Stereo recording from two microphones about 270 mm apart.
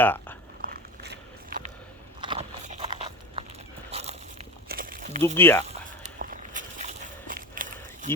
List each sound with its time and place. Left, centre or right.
0.0 s a sound: centre
0.6 s biting: right
2.2 s biting: right
3.9 s a sound: right
5.2 s speech: centre
5.6 s walk: right